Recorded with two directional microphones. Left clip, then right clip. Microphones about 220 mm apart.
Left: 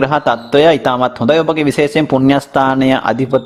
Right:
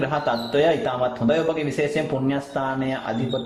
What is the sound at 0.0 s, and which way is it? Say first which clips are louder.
A man's voice: left 10 dB; 45° left (ahead or behind).